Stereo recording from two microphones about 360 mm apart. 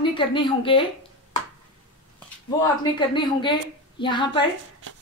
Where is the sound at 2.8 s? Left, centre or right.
Centre.